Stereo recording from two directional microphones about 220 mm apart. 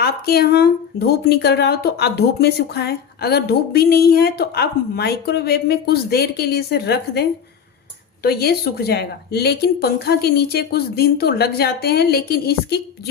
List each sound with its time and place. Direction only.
0.0 s speech: 45° left (ahead or behind)